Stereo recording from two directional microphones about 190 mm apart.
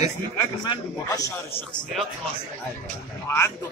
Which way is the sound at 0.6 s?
20° left (ahead or behind).